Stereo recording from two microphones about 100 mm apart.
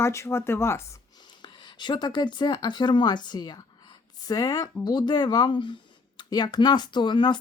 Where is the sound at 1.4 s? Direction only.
50° left (ahead or behind).